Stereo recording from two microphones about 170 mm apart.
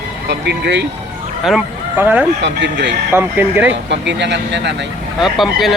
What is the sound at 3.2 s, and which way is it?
Speech, 10° right (ahead or behind).